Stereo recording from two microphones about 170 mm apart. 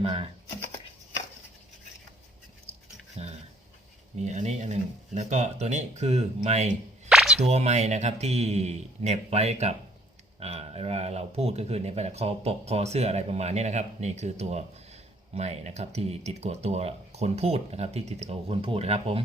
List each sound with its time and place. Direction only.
0.0 s speech: 35° right (ahead or behind)
3.2 s dog: 40° right (ahead or behind)
4.2 s speech: 40° right (ahead or behind)
7.1 s a sound: centre (ahead or behind)
7.4 s speech: 40° right (ahead or behind)